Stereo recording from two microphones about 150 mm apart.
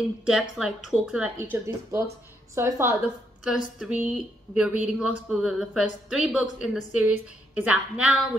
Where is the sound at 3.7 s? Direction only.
5° right (ahead or behind).